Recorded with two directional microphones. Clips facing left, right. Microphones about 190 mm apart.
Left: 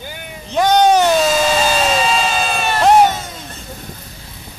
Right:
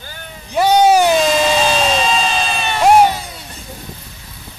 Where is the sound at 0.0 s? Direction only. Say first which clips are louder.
Left 4 dB; 15° left (ahead or behind).